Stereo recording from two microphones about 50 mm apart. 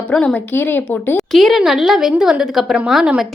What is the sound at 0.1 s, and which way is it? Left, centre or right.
Speech, centre.